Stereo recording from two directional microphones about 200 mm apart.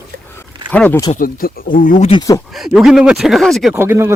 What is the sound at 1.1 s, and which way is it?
Speech, 45° left (ahead or behind).